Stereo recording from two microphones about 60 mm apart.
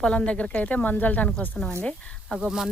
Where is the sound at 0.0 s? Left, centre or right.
Centre.